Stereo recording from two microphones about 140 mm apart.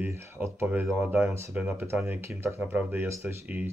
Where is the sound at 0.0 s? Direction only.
15° right (ahead or behind).